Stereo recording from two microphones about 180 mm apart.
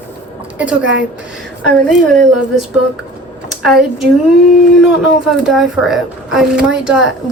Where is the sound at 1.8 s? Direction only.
Centre (ahead or behind).